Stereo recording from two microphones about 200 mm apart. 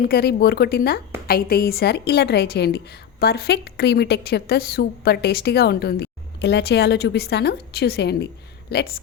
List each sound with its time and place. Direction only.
0.0 s a woman's voice: 50° left (ahead or behind)